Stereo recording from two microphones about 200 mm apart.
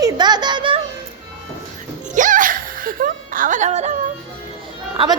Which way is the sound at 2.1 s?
40° right (ahead or behind).